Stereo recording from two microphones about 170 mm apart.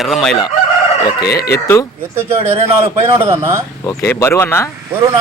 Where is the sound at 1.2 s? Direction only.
70° left (ahead or behind).